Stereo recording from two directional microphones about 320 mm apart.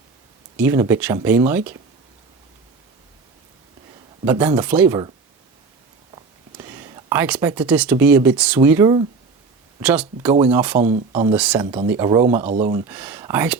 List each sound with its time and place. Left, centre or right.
0.5 s speech: centre
4.3 s speech: centre
6.6 s speech: centre
10.8 s speech: centre
11.3 s speech: centre
11.6 s speech: centre
12.5 s speech: right
12.9 s speech: centre